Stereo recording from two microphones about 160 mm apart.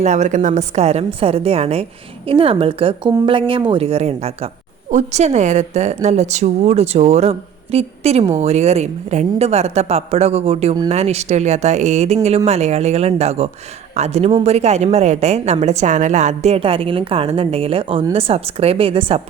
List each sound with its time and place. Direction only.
0.0 s a woman's voice: 50° right (ahead or behind)